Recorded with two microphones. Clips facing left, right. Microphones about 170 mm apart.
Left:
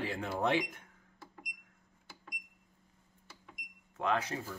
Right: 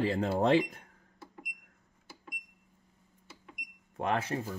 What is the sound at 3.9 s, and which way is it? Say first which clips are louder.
Speech: right 2 dB; 30° right (ahead or behind).